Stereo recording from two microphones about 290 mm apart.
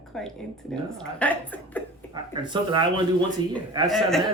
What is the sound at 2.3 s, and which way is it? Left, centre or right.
Speech, centre.